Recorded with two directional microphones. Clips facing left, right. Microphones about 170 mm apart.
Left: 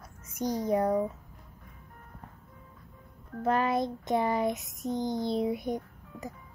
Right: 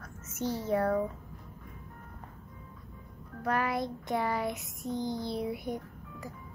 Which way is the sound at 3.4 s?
25° left (ahead or behind).